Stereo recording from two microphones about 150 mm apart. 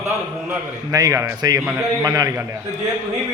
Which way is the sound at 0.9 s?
20° right (ahead or behind).